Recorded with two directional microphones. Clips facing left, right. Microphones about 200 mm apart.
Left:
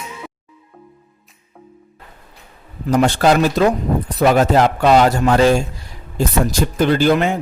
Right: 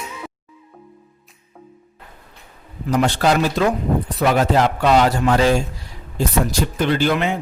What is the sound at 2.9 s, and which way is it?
Speech, 45° left (ahead or behind).